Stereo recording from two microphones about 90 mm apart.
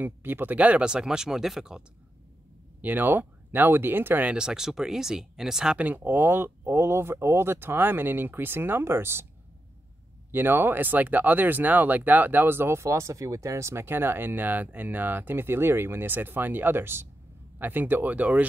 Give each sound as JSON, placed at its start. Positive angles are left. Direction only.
{"t": 0.0, "sound": "speech", "side_deg": -20}
{"t": 2.8, "sound": "speech", "side_deg": -20}
{"t": 10.3, "sound": "speech", "side_deg": -20}